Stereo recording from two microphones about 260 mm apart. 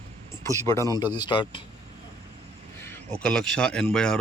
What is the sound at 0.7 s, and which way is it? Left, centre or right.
Speech, centre.